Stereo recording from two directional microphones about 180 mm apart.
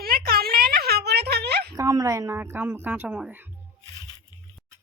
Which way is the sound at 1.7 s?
20° right (ahead or behind).